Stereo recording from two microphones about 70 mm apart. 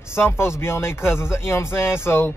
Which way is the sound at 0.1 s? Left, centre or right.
Left.